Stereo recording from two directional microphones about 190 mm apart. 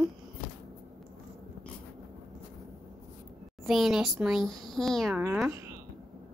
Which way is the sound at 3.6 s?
Centre (ahead or behind).